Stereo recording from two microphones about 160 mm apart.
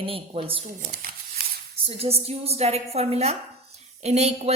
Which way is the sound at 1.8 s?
40° right (ahead or behind).